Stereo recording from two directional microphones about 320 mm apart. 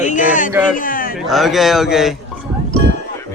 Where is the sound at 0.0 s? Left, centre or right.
Left.